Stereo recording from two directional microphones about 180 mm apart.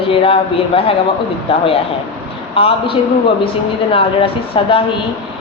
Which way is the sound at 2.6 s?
30° left (ahead or behind).